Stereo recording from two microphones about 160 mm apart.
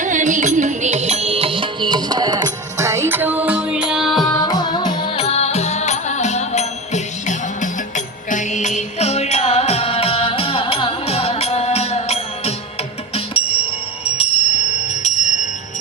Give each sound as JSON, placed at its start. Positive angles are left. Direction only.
{"t": 0.0, "sound": "music", "side_deg": -50}
{"t": 4.3, "sound": "music", "side_deg": 25}